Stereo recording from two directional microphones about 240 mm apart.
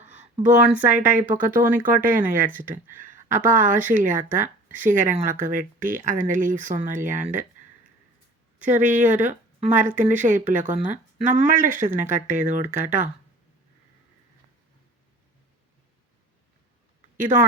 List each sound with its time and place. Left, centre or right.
0.1 s a sound: right
0.7 s speech: centre
0.9 s speech: right
8.7 s speech: right